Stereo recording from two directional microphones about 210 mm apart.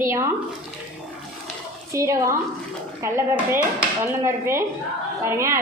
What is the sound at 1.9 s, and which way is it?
Speech, 15° right (ahead or behind).